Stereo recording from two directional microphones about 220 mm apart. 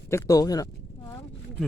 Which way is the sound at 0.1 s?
15° left (ahead or behind).